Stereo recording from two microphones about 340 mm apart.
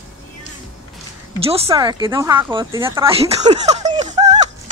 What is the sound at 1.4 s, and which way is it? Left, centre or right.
Speech, centre.